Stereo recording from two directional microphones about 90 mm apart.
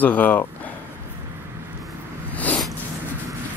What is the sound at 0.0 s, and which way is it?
Speech, 20° left (ahead or behind).